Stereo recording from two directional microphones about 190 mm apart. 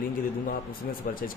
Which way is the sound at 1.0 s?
50° left (ahead or behind).